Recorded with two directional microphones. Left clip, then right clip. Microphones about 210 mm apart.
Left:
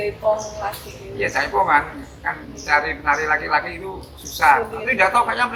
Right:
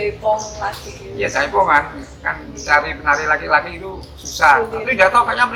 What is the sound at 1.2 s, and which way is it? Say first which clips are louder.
Speech: right 3 dB; 15° right (ahead or behind).